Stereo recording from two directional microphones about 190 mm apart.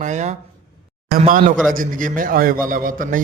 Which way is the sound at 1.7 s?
45° right (ahead or behind).